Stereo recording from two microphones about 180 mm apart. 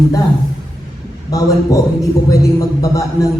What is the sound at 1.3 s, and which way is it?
A man's voice, 20° left (ahead or behind).